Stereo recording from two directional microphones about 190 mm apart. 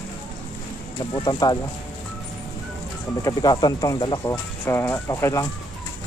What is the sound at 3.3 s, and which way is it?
Speech, 20° left (ahead or behind).